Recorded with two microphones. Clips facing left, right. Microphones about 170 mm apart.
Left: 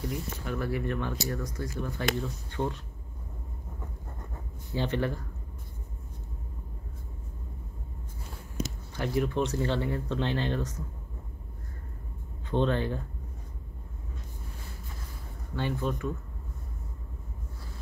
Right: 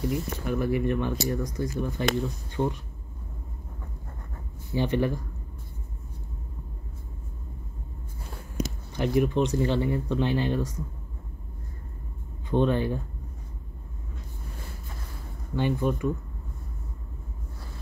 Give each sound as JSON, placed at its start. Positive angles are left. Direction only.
{"t": 0.5, "sound": "speech", "side_deg": -15}
{"t": 4.7, "sound": "speech", "side_deg": -15}
{"t": 8.6, "sound": "a sound", "side_deg": -15}
{"t": 8.9, "sound": "speech", "side_deg": -15}
{"t": 12.4, "sound": "speech", "side_deg": -10}
{"t": 15.5, "sound": "speech", "side_deg": -15}